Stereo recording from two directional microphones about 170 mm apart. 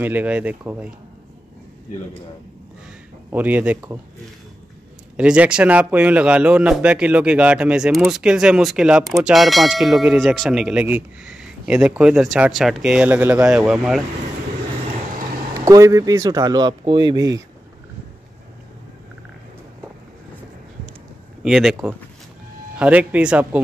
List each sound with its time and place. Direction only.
0.0 s a man's voice: 10° right (ahead or behind)
3.3 s a man's voice: 10° right (ahead or behind)
5.1 s a man's voice: 5° right (ahead or behind)
15.6 s speech: 20° right (ahead or behind)
21.4 s a man's voice: centre (ahead or behind)